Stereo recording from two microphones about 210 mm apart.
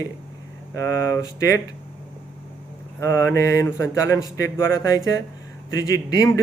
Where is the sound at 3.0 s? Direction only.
15° left (ahead or behind).